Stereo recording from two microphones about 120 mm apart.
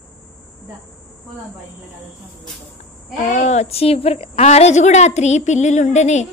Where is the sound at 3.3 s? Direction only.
70° left (ahead or behind).